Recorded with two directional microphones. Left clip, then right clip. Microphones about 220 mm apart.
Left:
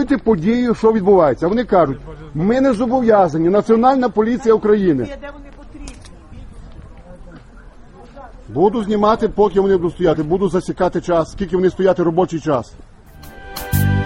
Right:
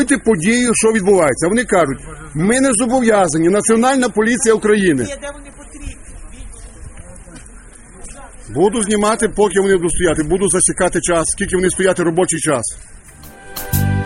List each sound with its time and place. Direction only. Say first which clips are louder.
0.0 s speech: right 2 dB; 20° right (ahead or behind)
5.0 s a man's voice: right 3 dB; 75° right (ahead or behind)
8.5 s speech: right 1 dB; 10° right (ahead or behind)
13.2 s music: left 1 dB; centre (ahead or behind)